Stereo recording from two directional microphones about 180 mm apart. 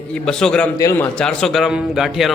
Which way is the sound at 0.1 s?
5° left (ahead or behind).